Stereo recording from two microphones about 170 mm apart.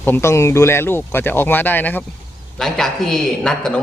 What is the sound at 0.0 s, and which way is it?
Speech, 15° left (ahead or behind).